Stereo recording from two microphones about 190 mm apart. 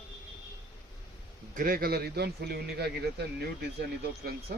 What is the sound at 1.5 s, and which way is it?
A man's voice, 50° right (ahead or behind).